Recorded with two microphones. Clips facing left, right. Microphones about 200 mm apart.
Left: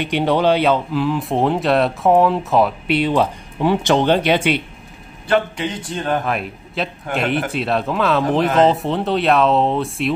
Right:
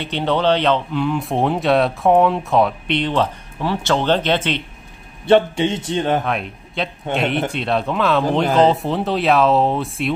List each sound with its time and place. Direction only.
0.0 s speech: 10° left (ahead or behind)
5.2 s a man's voice: 25° right (ahead or behind)
6.2 s speech: centre (ahead or behind)